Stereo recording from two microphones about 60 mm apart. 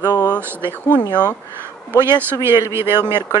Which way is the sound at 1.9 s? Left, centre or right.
Right.